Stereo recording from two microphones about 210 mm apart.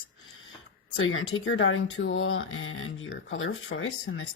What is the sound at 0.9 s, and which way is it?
Speech, 75° left (ahead or behind).